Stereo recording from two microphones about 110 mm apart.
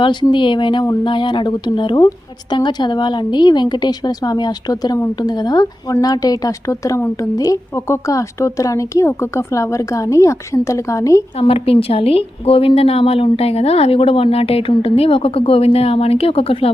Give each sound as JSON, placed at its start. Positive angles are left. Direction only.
{"t": 0.0, "sound": "a woman's voice", "side_deg": 45}
{"t": 11.3, "sound": "a woman's voice", "side_deg": 60}